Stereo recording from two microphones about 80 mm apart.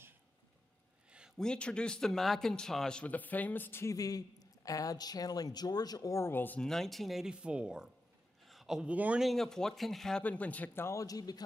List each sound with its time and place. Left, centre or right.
1.4 s speech: centre
3.8 s a man's voice: left
6.1 s speech: left
6.6 s speech: centre
8.5 s a sound: centre
8.9 s speech: centre
9.2 s speech: centre
10.2 s speech: centre
11.0 s a man's voice: left